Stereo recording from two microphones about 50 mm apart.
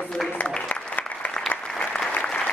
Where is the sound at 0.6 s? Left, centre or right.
Left.